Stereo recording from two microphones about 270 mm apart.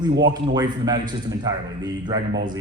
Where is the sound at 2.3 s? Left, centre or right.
Right.